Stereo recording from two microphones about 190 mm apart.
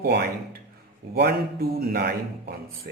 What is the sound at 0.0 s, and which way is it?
A man's voice, 55° right (ahead or behind).